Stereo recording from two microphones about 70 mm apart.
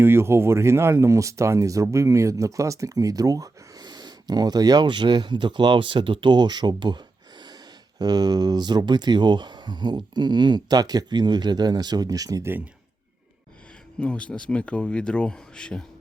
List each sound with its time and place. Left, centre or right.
0.0 s speech: right
7.9 s speech: right
12.4 s speech: right
14.0 s speech: centre